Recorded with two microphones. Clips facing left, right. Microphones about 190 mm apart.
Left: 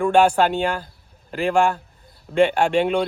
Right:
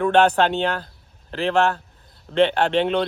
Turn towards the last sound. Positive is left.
turn(degrees=10)  # may be behind; listen again after turning